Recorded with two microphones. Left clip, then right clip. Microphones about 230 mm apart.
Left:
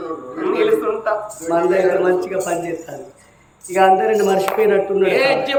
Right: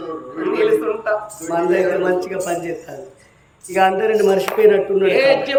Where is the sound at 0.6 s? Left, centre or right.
Centre.